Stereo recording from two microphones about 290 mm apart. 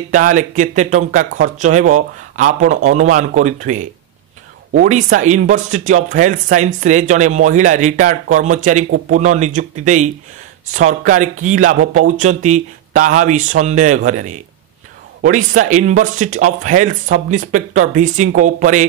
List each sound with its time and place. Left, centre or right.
0.1 s speech: right